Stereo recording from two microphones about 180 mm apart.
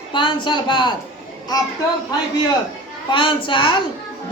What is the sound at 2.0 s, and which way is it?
A man's voice, 20° left (ahead or behind).